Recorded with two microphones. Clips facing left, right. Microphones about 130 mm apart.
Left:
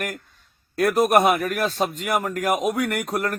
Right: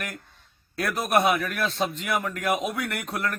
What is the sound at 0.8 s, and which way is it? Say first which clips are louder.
A man's voice: left 6 dB; 45° left (ahead or behind).